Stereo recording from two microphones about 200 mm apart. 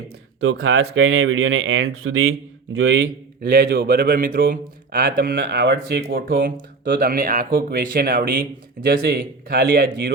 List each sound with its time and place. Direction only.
0.6 s speech: 85° right
3.4 s speech: 50° right (ahead or behind)